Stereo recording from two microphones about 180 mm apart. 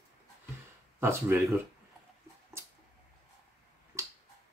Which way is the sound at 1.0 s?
15° right (ahead or behind).